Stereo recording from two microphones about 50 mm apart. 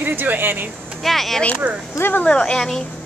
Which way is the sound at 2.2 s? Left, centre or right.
Centre.